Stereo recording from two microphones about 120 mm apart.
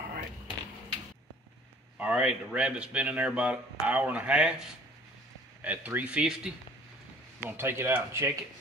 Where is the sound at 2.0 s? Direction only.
10° right (ahead or behind).